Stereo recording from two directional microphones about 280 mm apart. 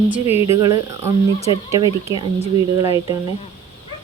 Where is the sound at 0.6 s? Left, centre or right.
Centre.